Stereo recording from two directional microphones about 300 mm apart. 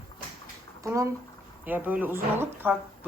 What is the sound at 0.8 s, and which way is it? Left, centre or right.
Speech, centre.